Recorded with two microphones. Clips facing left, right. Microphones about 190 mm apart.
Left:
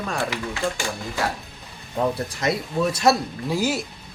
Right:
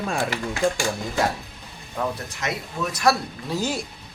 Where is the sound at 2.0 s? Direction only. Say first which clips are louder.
Left 4 dB; 35° left (ahead or behind).